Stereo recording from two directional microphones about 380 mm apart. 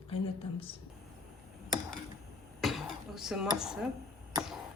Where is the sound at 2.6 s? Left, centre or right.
Centre.